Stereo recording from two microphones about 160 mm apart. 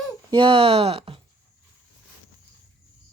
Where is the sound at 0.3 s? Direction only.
35° right (ahead or behind).